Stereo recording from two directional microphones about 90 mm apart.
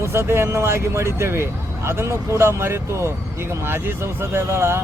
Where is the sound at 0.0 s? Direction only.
30° right (ahead or behind).